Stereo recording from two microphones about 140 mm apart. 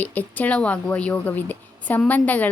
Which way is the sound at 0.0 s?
10° left (ahead or behind).